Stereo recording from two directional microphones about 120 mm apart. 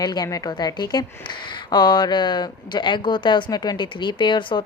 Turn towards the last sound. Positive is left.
turn(degrees=40)  # may be behind; listen again after turning